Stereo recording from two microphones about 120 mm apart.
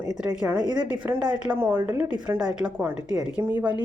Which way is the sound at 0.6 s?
40° right (ahead or behind).